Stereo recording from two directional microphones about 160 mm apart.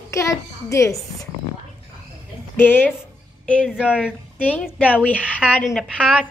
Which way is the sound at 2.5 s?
15° left (ahead or behind).